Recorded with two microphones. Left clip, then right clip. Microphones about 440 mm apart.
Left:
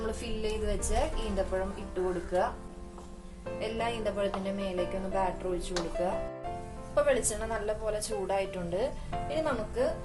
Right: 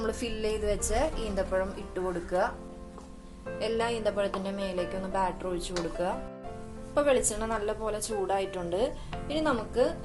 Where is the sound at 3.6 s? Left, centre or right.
Centre.